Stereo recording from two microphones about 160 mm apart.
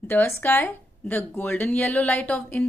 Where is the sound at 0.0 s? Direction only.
15° left (ahead or behind).